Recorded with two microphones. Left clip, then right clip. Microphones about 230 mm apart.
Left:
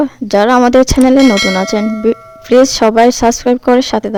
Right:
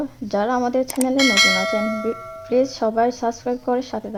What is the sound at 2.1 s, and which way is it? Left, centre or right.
Speech, left.